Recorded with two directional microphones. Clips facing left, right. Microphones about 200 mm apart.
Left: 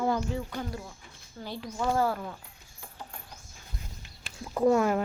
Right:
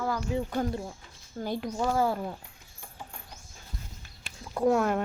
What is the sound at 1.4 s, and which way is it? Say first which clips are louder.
Speech: right 6 dB; 50° right (ahead or behind).